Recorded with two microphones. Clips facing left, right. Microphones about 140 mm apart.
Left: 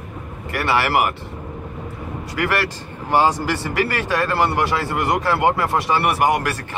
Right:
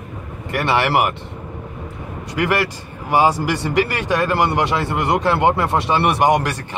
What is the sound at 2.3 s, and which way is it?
A man's voice, 15° right (ahead or behind).